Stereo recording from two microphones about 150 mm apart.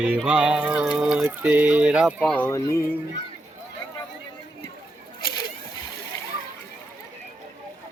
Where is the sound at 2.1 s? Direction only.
5° left (ahead or behind).